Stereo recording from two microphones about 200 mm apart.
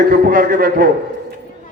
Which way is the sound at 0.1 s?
45° right (ahead or behind).